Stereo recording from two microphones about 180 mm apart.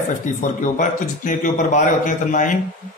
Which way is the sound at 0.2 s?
45° left (ahead or behind).